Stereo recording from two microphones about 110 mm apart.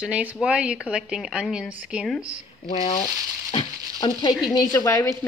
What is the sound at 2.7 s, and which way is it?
Speech, 90° left.